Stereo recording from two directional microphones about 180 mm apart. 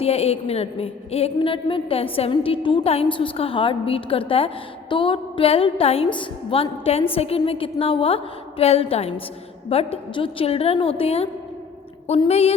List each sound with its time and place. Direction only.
0.0 s a woman's voice: 35° left (ahead or behind)